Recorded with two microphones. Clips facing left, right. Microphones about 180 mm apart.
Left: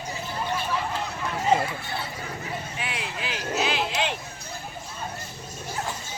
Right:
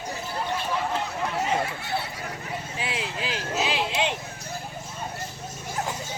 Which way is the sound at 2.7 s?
30° right (ahead or behind).